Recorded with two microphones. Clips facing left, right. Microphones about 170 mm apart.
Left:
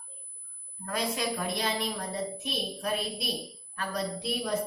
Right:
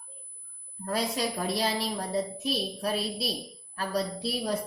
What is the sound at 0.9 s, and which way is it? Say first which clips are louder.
A woman's voice: right 2 dB; 35° right (ahead or behind).